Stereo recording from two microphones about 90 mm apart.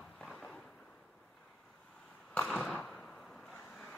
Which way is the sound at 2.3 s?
10° left (ahead or behind).